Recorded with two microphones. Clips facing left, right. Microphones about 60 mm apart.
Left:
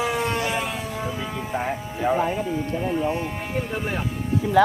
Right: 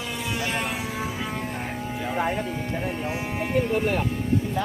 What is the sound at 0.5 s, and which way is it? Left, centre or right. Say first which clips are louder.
Vehicle: left 1 dB; centre.